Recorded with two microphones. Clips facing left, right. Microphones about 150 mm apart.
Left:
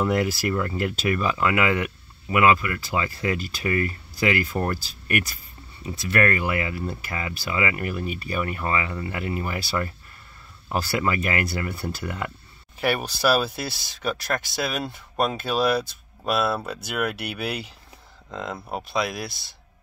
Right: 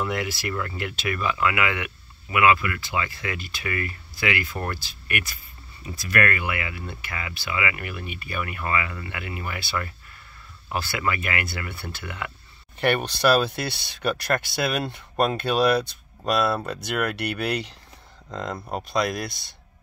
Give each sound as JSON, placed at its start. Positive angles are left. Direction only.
{"t": 0.0, "sound": "speech", "side_deg": 40}
{"t": 5.9, "sound": "speech", "side_deg": 25}
{"t": 12.7, "sound": "speech", "side_deg": 5}